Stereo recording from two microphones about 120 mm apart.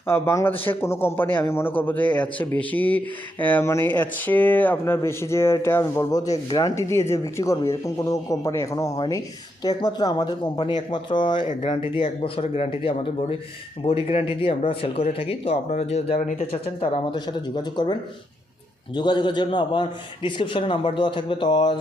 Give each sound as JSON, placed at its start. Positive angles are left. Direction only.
{"t": 0.1, "sound": "a man's voice", "side_deg": 20}
{"t": 18.9, "sound": "speech", "side_deg": 40}